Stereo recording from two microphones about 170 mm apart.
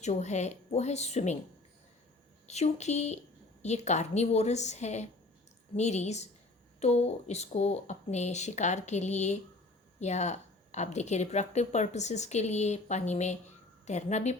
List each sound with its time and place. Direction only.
0.0 s a woman's voice: 40° left (ahead or behind)
2.5 s a woman's voice: 40° left (ahead or behind)